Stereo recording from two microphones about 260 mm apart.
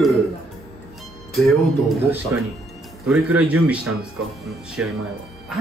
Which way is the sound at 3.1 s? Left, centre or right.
Centre.